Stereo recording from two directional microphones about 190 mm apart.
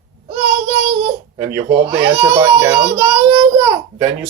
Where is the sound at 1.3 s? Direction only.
15° right (ahead or behind).